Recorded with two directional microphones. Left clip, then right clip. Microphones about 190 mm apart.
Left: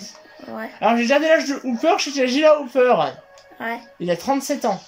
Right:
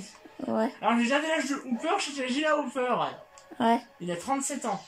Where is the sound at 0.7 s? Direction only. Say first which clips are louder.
Left 12 dB; 65° left (ahead or behind).